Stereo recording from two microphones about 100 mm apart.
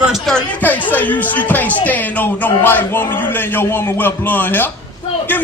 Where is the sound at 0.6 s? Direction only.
15° left (ahead or behind).